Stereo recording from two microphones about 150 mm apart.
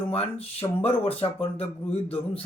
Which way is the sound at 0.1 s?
40° left (ahead or behind).